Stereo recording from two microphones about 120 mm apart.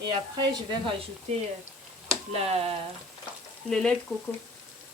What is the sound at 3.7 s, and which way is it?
Speech, 5° left (ahead or behind).